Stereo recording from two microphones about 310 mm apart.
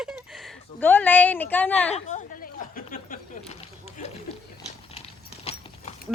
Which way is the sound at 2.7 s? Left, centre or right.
Left.